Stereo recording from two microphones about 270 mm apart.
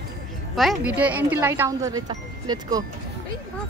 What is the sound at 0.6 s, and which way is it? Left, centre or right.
Speech, centre.